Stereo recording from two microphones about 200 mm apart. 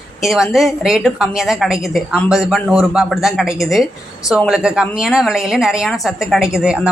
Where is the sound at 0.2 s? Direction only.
Centre (ahead or behind).